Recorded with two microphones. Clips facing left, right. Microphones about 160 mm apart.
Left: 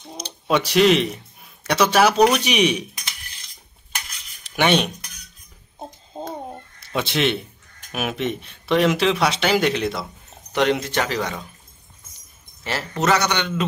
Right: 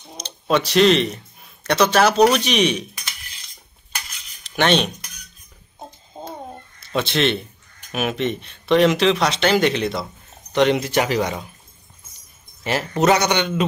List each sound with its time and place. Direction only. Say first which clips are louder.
0.2 s speech: right 1 dB; 10° left (ahead or behind)
4.5 s cutlery: right 1 dB; 10° left (ahead or behind)
6.1 s a sound: left 3 dB; 30° left (ahead or behind)
6.8 s a man's voice: right 2 dB; 10° left (ahead or behind); by 11.4 s 15° right (ahead or behind)
12.6 s a man's voice: right 4 dB; 15° right (ahead or behind)